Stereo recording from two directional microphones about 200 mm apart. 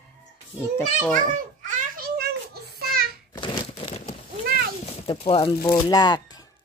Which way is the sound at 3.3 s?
25° left (ahead or behind).